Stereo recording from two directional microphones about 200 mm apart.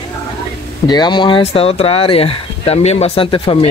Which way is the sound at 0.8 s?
20° left (ahead or behind).